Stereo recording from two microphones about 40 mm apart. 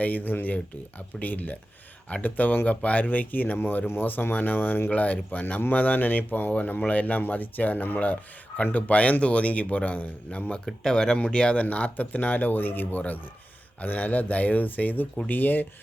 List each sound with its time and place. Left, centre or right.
0.0 s speech: left
3.6 s speech: left
4.0 s speech: left
4.9 s speech: left
6.8 s speech: left
10.8 s speech: centre
11.5 s speech: left